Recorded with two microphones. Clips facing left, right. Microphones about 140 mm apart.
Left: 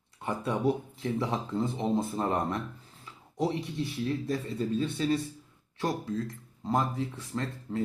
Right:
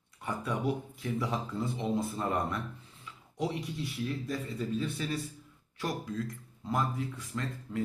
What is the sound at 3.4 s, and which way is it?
Speech, 30° left (ahead or behind).